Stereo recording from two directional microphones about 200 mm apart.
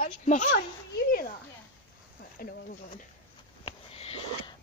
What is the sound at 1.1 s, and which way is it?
Speech, 50° left (ahead or behind).